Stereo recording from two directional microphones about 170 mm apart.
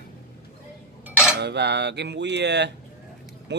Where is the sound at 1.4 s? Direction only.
80° right.